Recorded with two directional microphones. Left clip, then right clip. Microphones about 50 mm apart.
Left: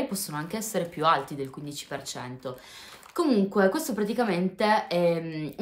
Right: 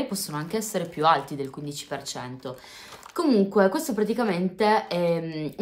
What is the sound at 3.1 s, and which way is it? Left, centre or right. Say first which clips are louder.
A woman's voice: right 3 dB; centre.